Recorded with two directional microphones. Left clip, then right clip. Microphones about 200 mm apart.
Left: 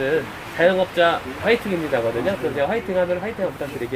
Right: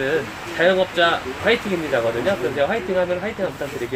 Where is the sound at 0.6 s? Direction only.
25° left (ahead or behind).